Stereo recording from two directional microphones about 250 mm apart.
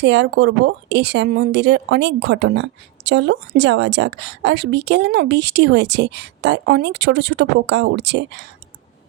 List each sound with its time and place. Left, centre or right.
0.0 s a woman's voice: right